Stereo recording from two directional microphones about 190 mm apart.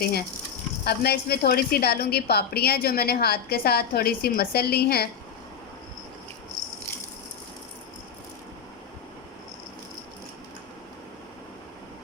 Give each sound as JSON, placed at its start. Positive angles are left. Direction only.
{"t": 0.0, "sound": "a woman's voice", "side_deg": 55}